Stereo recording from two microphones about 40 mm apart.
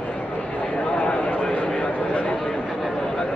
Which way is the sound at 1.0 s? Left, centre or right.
Left.